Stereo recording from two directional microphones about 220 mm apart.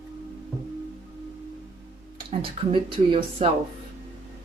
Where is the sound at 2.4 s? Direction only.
25° right (ahead or behind).